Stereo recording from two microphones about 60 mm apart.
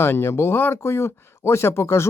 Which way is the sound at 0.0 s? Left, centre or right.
Left.